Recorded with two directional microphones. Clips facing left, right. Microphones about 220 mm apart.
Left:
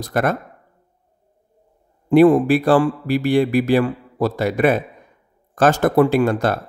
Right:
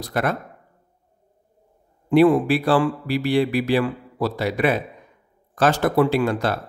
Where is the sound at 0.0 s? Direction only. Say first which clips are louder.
Left 4 dB; 45° left (ahead or behind).